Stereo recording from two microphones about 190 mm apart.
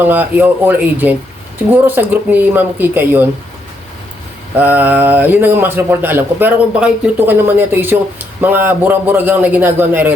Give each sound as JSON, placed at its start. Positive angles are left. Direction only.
{"t": 0.0, "sound": "speech", "side_deg": -10}
{"t": 4.5, "sound": "speech", "side_deg": -10}